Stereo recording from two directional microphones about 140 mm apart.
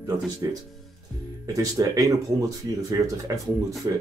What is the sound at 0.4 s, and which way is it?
Speech, 25° right (ahead or behind).